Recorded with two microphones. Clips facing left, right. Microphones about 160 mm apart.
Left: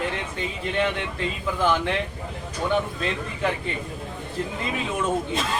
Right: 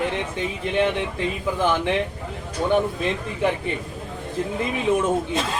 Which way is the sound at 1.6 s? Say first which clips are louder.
Even; 15° right (ahead or behind).